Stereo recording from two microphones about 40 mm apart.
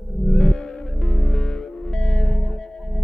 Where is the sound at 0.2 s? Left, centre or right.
Centre.